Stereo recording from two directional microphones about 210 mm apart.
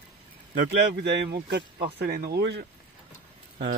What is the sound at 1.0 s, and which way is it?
Speech, 50° right (ahead or behind).